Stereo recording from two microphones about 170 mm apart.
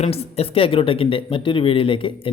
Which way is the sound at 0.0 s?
35° left (ahead or behind).